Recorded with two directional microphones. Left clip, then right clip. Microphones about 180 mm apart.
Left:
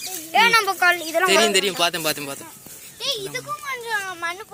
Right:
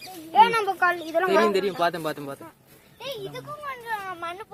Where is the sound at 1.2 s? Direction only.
5° left (ahead or behind).